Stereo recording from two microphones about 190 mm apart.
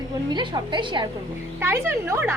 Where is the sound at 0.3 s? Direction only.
25° right (ahead or behind).